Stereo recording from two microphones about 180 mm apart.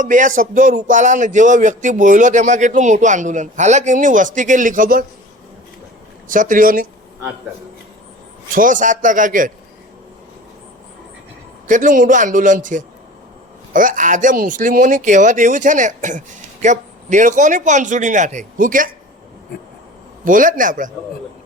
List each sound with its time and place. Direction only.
0.0 s speech: 45° right (ahead or behind)
6.2 s speech: 45° right (ahead or behind)
8.5 s speech: 45° right (ahead or behind)
11.7 s speech: 45° right (ahead or behind)
20.2 s speech: 50° right (ahead or behind)